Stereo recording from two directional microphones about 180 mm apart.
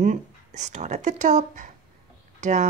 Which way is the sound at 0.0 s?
45° right (ahead or behind).